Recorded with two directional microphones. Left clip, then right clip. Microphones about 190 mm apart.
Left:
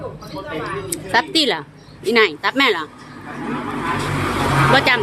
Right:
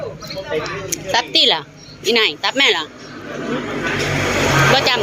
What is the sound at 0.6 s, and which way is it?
Speech, 20° left (ahead or behind).